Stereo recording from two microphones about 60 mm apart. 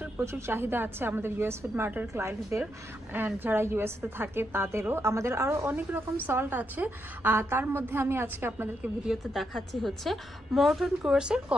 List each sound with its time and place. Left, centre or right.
0.2 s a woman's voice: right
3.1 s a woman's voice: right
6.2 s a woman's voice: right
7.3 s a woman's voice: right
8.8 s a woman's voice: centre
9.3 s a woman's voice: centre